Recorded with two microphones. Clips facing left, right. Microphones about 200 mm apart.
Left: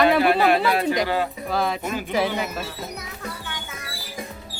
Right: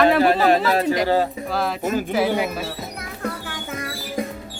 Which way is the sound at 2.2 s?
50° right (ahead or behind).